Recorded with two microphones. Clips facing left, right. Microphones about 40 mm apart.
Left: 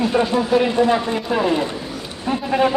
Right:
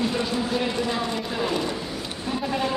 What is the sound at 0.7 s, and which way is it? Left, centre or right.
Speech, left.